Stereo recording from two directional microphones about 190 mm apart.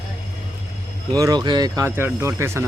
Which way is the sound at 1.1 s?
20° right (ahead or behind).